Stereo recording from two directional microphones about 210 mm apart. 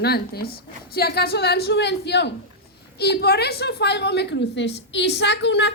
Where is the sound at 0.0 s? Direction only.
50° left (ahead or behind).